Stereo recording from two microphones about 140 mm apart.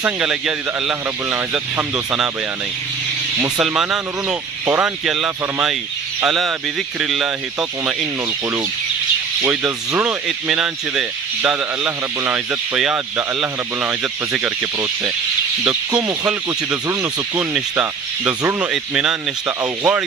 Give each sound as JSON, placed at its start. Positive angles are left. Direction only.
{"t": 0.0, "sound": "speech", "side_deg": -5}
{"t": 3.5, "sound": "speech", "side_deg": -5}
{"t": 9.4, "sound": "speech", "side_deg": -10}
{"t": 18.7, "sound": "speech", "side_deg": -5}